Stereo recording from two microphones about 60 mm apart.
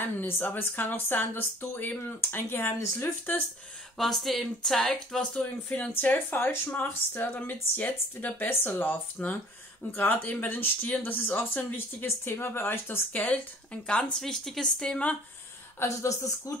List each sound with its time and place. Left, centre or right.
0.0 s speech: left
4.0 s speech: centre
5.7 s speech: left
12.3 s speech: left
13.1 s speech: left
14.2 s speech: centre
15.8 s speech: left